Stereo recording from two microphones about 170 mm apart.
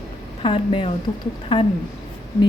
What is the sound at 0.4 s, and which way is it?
Speech, 30° left (ahead or behind).